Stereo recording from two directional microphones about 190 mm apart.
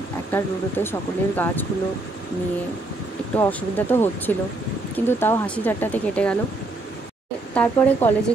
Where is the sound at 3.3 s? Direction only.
10° left (ahead or behind).